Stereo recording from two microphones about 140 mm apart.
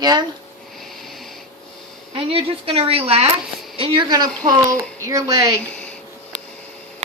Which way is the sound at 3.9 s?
25° right (ahead or behind).